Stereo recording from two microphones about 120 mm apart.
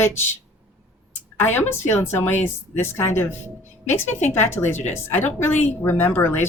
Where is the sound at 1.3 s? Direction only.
15° left (ahead or behind).